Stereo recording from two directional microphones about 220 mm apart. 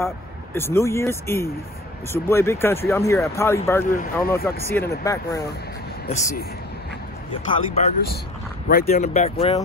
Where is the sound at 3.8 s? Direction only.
35° left (ahead or behind).